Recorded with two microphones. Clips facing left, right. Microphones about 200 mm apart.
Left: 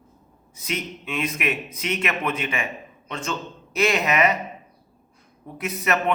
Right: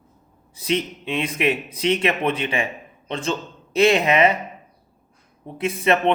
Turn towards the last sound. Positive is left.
turn(degrees=-30)  # may be behind; listen again after turning